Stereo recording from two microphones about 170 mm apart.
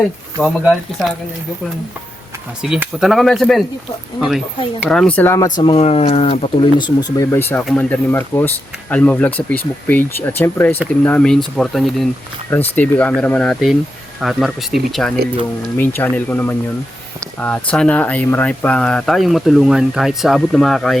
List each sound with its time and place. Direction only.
0.4 s speech: centre (ahead or behind)
2.6 s speech: 5° right (ahead or behind); by 5.5 s 15° left (ahead or behind)
5.6 s speech: 35° left (ahead or behind); by 21.0 s centre (ahead or behind)